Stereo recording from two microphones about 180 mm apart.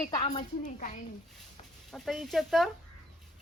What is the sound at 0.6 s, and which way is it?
Speech, 45° left (ahead or behind).